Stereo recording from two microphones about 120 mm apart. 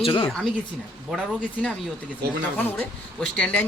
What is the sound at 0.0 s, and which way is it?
Speech, 45° left (ahead or behind).